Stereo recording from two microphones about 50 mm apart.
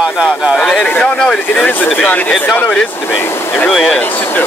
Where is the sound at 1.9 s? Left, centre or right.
Left.